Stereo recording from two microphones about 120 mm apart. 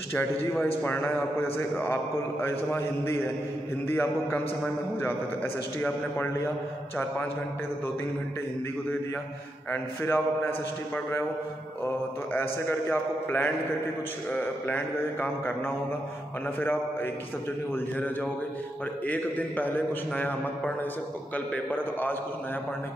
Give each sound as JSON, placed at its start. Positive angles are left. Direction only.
{"t": 0.8, "sound": "a man's voice", "side_deg": 15}
{"t": 9.7, "sound": "a man's voice", "side_deg": 20}
{"t": 12.4, "sound": "a man's voice", "side_deg": 20}